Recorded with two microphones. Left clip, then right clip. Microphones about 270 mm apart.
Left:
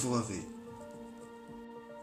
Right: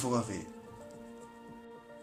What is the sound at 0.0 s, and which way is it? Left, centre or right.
Speech, right.